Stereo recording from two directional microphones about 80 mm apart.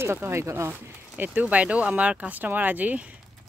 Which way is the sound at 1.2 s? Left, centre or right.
Right.